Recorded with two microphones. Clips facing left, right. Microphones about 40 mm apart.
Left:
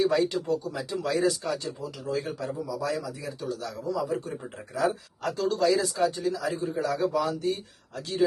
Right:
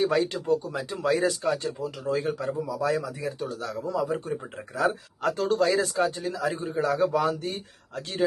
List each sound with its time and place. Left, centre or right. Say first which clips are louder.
0.0 s speech: even; right